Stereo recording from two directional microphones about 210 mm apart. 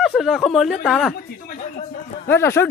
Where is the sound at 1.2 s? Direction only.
45° left (ahead or behind).